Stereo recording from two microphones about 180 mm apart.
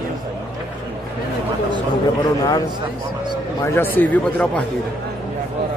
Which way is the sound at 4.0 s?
10° left (ahead or behind).